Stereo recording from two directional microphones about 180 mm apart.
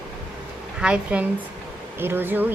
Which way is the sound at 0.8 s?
5° right (ahead or behind).